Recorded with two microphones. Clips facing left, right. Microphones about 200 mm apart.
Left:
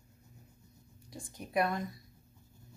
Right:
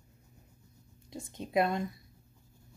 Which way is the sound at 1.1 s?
25° right (ahead or behind).